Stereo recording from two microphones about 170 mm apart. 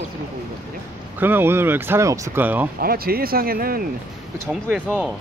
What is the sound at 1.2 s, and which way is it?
Speech, 10° right (ahead or behind).